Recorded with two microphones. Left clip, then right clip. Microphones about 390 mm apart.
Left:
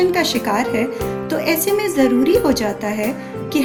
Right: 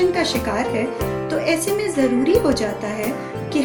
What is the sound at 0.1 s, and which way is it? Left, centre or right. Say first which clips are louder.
A woman's voice: left 3 dB; centre.